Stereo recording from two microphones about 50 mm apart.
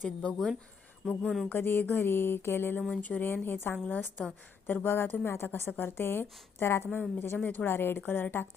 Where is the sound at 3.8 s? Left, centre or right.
Left.